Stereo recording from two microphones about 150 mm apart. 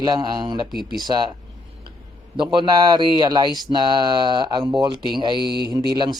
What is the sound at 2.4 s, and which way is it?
Speech, 30° right (ahead or behind).